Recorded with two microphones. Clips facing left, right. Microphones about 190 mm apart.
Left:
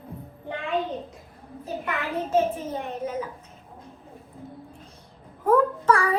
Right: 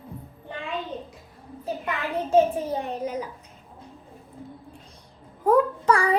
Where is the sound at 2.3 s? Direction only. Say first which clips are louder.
Right 4 dB; 35° right (ahead or behind).